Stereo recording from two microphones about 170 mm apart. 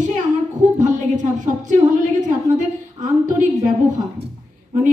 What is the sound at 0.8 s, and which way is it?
A woman's voice, 45° right (ahead or behind).